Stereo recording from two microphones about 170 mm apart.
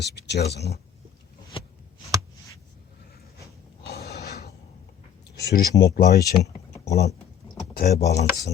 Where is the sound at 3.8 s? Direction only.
70° left (ahead or behind).